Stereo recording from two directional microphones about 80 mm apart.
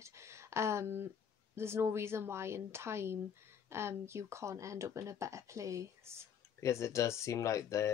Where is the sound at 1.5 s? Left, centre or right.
Right.